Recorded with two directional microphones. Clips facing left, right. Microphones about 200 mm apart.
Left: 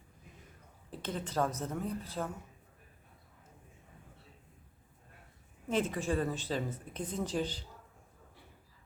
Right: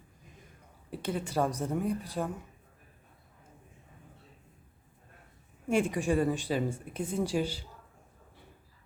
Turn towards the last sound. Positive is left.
turn(degrees=-10)  # may be behind; listen again after turning